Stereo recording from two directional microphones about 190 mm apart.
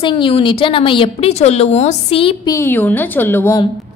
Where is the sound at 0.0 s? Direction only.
25° left (ahead or behind).